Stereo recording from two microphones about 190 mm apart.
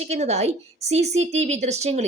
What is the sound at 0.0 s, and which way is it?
A woman's voice, 35° right (ahead or behind).